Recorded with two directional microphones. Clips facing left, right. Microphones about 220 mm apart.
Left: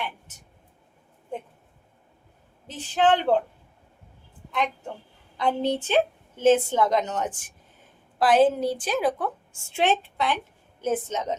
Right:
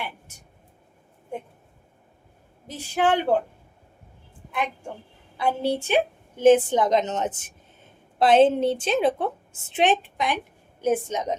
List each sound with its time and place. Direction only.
2.6 s speech: 10° right (ahead or behind)
5.4 s a woman's voice: 10° right (ahead or behind)